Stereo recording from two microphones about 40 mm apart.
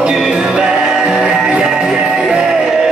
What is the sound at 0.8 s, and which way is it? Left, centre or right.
Music, centre.